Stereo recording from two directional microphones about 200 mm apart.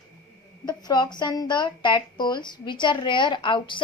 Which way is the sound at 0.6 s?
20° left (ahead or behind).